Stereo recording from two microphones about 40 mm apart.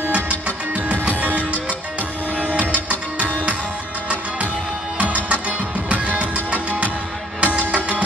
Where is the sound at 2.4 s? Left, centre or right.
Right.